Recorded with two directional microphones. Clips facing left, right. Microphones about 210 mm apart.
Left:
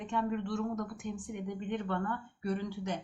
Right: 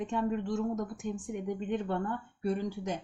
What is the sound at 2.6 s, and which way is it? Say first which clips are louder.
Speech: right 2 dB; 45° right (ahead or behind).